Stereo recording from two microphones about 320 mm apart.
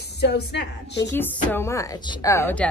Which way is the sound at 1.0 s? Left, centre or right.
Centre.